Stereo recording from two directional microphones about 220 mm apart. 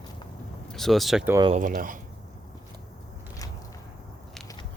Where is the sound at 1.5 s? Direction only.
40° right (ahead or behind).